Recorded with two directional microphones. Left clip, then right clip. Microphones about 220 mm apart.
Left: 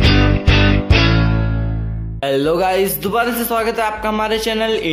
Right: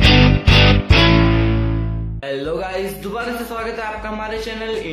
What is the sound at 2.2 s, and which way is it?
Speech, 45° left (ahead or behind).